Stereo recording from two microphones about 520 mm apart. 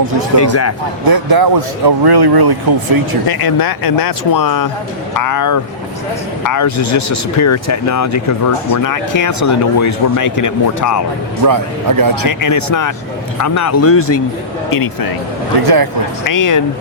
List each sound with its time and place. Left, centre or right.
0.3 s speech: left
1.0 s speech: right
3.2 s speech: left
11.4 s a man's voice: right
12.3 s speech: left
15.6 s speech: right
16.2 s speech: left